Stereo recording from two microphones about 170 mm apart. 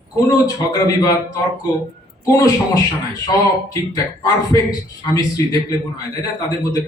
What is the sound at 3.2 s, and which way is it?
A man's voice, 20° left (ahead or behind).